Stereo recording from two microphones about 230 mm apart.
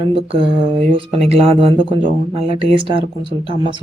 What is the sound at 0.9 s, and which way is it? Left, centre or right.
Speech, right.